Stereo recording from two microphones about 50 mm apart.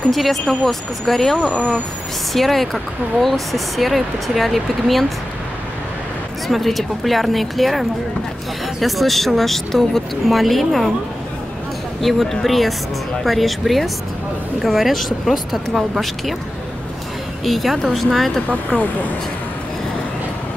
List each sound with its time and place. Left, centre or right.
0.1 s speech: centre
6.4 s speech: centre
12.0 s speech: centre
17.5 s speech: centre